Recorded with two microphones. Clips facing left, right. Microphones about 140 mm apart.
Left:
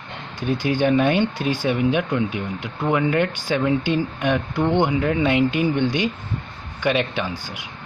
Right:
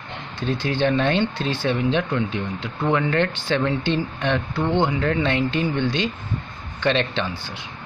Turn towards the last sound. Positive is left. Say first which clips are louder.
# even
turn(degrees=10)  # may be behind; listen again after turning